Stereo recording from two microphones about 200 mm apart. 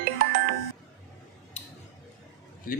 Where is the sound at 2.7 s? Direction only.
45° left (ahead or behind).